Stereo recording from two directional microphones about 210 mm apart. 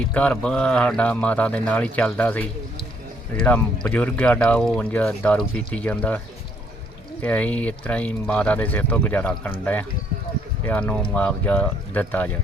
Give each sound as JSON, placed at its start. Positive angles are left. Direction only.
{"t": 0.1, "sound": "speech", "side_deg": 5}
{"t": 7.2, "sound": "speech", "side_deg": 5}
{"t": 10.7, "sound": "speech", "side_deg": 5}